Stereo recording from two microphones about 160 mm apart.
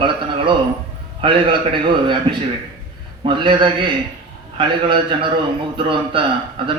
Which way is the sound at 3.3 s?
30° right (ahead or behind).